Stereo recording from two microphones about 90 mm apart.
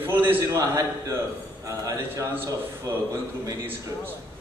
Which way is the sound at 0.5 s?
40° right (ahead or behind).